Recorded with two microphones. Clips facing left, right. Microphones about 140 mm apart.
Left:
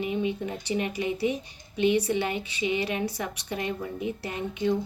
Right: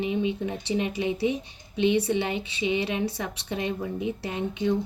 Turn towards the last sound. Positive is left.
turn(degrees=-20)  # may be behind; listen again after turning